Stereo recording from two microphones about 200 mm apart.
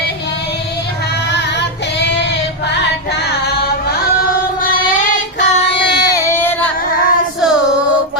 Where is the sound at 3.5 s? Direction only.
50° left (ahead or behind).